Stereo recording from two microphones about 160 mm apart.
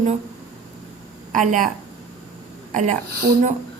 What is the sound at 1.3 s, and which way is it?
Speech, 55° right (ahead or behind).